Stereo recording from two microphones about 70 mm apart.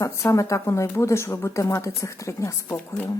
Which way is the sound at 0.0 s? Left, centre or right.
Left.